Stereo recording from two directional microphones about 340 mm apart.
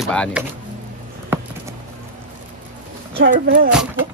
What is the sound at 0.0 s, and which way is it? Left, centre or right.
Speech, centre.